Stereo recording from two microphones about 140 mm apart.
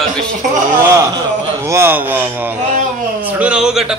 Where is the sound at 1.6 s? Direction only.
20° right (ahead or behind).